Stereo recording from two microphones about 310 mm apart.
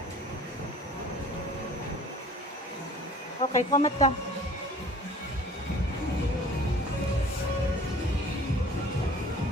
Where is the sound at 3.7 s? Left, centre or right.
Left.